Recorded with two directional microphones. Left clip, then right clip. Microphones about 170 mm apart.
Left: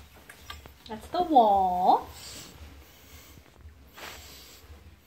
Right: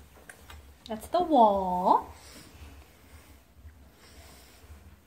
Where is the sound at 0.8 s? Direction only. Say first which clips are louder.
Right 1 dB; 45° right (ahead or behind).